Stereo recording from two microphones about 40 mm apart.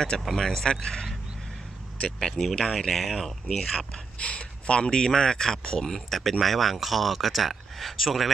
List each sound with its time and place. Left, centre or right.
0.2 s speech: centre
2.7 s speech: centre
4.2 s speech: left; by 8.3 s centre